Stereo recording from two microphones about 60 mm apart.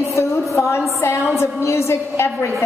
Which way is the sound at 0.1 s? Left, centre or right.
Left.